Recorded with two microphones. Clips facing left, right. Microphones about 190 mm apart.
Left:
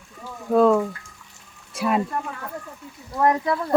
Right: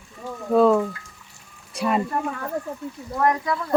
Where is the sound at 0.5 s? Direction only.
Centre (ahead or behind).